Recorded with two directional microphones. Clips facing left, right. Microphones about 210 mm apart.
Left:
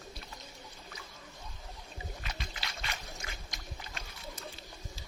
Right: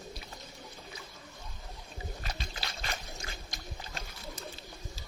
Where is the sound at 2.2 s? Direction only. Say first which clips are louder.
Right 2 dB; 35° right (ahead or behind).